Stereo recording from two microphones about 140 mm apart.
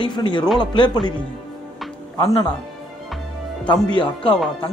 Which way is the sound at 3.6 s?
35° left (ahead or behind).